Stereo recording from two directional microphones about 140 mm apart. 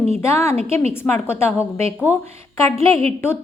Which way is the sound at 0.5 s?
45° right (ahead or behind).